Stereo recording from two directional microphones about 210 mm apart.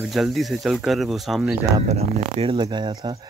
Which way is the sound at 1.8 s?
30° right (ahead or behind).